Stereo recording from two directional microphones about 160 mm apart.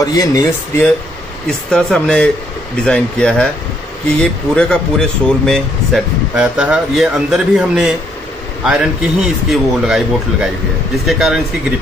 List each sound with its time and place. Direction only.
0.0 s speech: 25° left (ahead or behind)
1.7 s speech: 5° left (ahead or behind)